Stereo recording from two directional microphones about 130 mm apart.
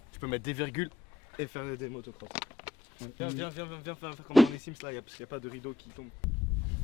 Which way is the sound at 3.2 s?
15° left (ahead or behind).